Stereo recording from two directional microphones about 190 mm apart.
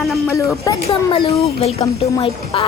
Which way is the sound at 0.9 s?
30° left (ahead or behind).